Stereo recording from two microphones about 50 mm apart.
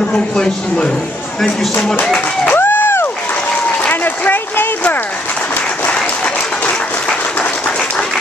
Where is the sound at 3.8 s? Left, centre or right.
Left.